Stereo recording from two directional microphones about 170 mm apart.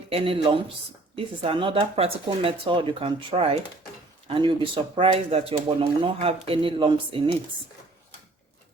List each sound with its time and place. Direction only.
0.1 s speech: 35° right (ahead or behind)